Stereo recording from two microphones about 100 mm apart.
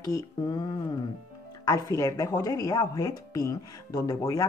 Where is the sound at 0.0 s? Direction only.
45° left (ahead or behind).